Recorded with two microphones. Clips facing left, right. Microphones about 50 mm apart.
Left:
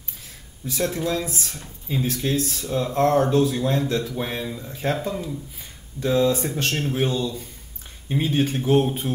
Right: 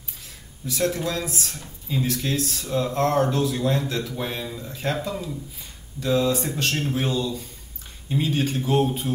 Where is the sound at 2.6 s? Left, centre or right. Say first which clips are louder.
Left 2 dB; centre.